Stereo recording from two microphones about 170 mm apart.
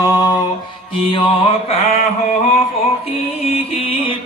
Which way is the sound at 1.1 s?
30° left (ahead or behind).